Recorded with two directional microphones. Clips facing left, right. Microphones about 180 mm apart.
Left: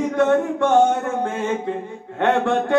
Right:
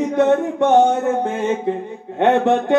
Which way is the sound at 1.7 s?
20° right (ahead or behind).